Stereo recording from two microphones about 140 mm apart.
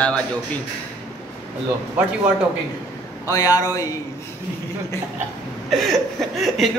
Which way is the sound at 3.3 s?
25° left (ahead or behind).